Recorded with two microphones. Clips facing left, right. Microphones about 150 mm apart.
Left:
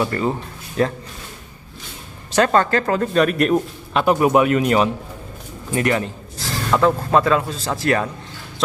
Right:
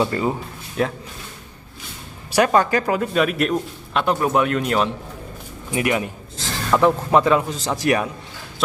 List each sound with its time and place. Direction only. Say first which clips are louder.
0.0 s speech: even; 15° right (ahead or behind)
0.8 s a man's voice: left 3 dB; 5° right (ahead or behind)
2.3 s a man's voice: even; 10° right (ahead or behind); by 4.9 s 5° left (ahead or behind)
5.7 s speech: left 2 dB; 10° right (ahead or behind)